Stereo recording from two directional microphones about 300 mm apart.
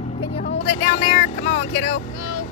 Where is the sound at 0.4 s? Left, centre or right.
Left.